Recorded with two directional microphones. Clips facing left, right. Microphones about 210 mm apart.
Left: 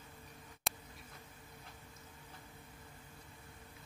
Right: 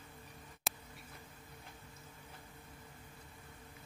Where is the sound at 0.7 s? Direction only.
Centre (ahead or behind).